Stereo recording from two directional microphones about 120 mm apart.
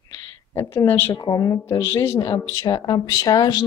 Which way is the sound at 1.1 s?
35° left (ahead or behind).